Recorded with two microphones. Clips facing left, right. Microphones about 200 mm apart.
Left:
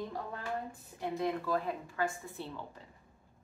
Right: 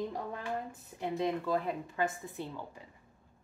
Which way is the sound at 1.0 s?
20° right (ahead or behind).